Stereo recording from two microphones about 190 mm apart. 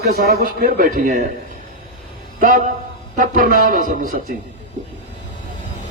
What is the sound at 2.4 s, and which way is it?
A man's voice, 45° right (ahead or behind).